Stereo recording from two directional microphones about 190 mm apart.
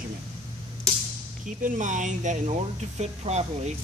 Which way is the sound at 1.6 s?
40° right (ahead or behind).